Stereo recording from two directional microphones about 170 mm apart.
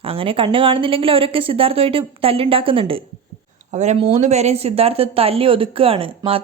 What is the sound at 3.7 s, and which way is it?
Speech, 45° right (ahead or behind).